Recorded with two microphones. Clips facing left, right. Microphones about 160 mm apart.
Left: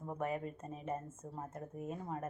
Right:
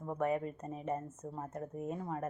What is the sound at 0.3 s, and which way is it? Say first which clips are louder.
Speech: right 5 dB; 30° right (ahead or behind).